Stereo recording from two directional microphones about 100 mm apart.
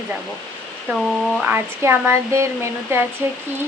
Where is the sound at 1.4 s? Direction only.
20° right (ahead or behind).